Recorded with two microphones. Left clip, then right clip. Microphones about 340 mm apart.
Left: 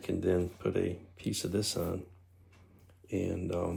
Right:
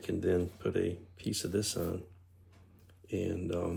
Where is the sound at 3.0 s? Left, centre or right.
Centre.